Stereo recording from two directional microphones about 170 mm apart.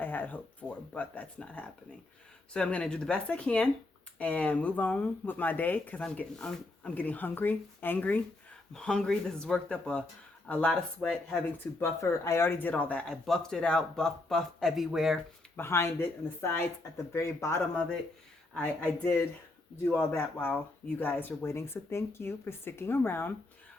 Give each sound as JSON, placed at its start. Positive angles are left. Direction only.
{"t": 0.0, "sound": "speech", "side_deg": 10}
{"t": 11.8, "sound": "speech", "side_deg": 15}
{"t": 15.5, "sound": "speech", "side_deg": 15}